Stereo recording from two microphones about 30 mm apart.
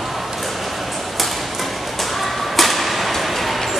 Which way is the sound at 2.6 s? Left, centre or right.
Centre.